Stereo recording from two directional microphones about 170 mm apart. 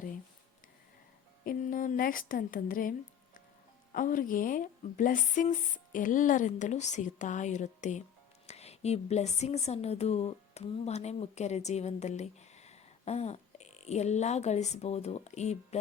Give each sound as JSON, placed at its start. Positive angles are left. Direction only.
{"t": 1.5, "sound": "speech", "side_deg": 50}
{"t": 3.9, "sound": "a woman's voice", "side_deg": 50}